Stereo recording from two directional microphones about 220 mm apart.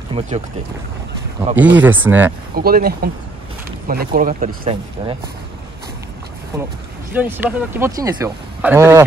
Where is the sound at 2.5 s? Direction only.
45° right (ahead or behind).